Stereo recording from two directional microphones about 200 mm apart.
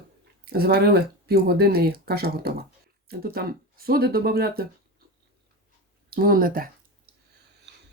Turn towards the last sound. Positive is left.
turn(degrees=-45)  # may be behind; listen again after turning